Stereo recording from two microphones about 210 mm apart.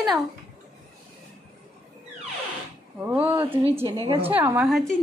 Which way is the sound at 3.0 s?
10° right (ahead or behind).